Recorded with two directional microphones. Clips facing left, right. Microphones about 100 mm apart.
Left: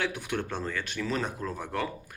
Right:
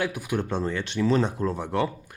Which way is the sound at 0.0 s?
10° right (ahead or behind).